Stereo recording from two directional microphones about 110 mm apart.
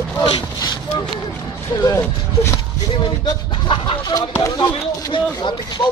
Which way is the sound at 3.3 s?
40° left (ahead or behind).